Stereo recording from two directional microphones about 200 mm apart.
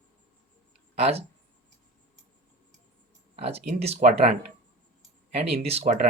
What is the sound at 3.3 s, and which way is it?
Speech, 30° right (ahead or behind).